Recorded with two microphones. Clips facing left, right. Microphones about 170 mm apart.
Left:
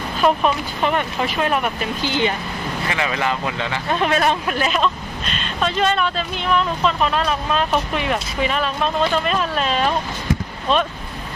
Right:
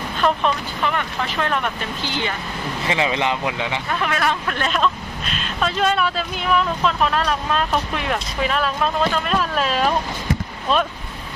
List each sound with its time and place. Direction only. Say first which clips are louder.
0.2 s speech: left 2 dB; 10° left (ahead or behind)
0.8 s speech: left 3 dB; 20° left (ahead or behind)
2.8 s speech: right 2 dB; 25° right (ahead or behind)
3.8 s speech: left 5 dB; 25° left (ahead or behind)
4.5 s speech: left 1 dB; 5° left (ahead or behind)